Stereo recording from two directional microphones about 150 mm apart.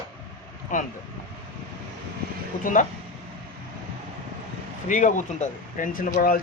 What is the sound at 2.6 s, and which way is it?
Speech, 60° left (ahead or behind).